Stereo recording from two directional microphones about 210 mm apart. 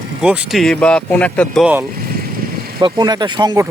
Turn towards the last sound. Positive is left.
turn(degrees=-20)  # may be behind; listen again after turning